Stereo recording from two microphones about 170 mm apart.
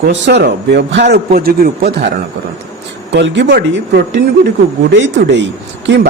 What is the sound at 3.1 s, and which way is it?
Speech, 90° right.